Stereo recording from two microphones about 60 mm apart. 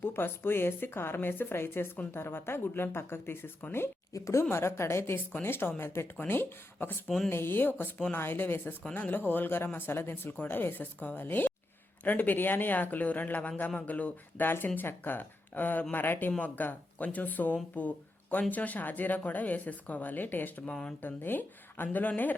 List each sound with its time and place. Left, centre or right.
0.0 s speech: left
4.1 s a woman's voice: left
4.4 s speech: left
20.7 s speech: centre
21.0 s speech: left